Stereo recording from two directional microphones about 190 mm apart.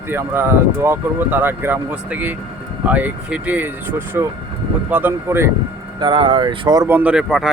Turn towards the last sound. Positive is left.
turn(degrees=-5)  # may be behind; listen again after turning